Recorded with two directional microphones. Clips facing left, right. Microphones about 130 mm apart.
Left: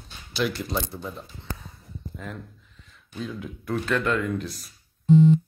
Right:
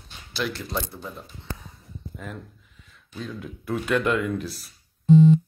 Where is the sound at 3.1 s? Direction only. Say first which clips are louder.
Left 1 dB; centre (ahead or behind).